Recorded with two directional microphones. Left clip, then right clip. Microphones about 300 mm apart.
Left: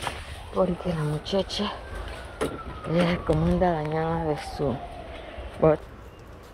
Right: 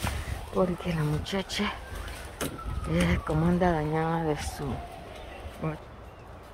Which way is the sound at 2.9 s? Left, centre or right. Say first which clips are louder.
Left 5 dB; centre.